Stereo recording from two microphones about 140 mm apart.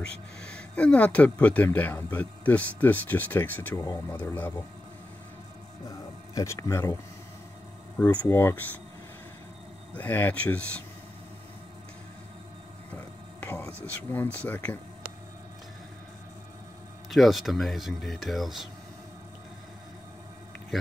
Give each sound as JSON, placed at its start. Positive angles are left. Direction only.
{"t": 0.0, "sound": "speech", "side_deg": 5}
{"t": 5.9, "sound": "speech", "side_deg": 20}
{"t": 8.0, "sound": "speech", "side_deg": 10}
{"t": 9.9, "sound": "speech", "side_deg": 10}
{"t": 12.9, "sound": "whispering", "side_deg": 15}
{"t": 13.8, "sound": "speech", "side_deg": 15}
{"t": 17.1, "sound": "speech", "side_deg": 0}